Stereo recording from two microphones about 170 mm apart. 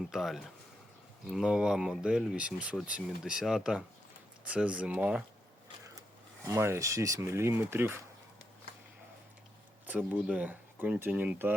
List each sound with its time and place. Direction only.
0.1 s speech: centre (ahead or behind)
6.5 s speech: 15° right (ahead or behind)
9.8 s speech: 10° right (ahead or behind)